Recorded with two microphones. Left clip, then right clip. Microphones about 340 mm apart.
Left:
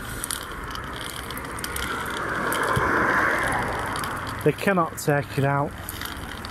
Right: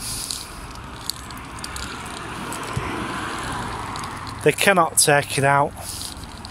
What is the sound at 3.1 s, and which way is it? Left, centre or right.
Vehicle, centre.